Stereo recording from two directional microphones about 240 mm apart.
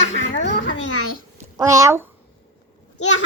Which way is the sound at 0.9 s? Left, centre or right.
Left.